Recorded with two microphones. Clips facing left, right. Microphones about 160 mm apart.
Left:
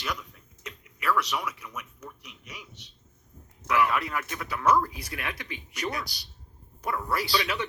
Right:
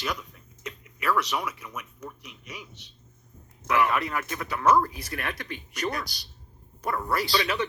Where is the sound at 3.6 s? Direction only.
25° right (ahead or behind).